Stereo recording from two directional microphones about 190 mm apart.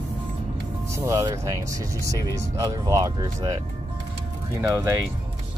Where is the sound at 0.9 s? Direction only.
15° right (ahead or behind).